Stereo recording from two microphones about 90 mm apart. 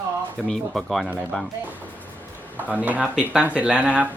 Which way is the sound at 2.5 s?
15° right (ahead or behind).